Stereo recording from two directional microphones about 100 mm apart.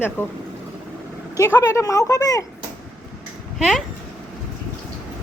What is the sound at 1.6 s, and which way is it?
Speech, 30° left (ahead or behind).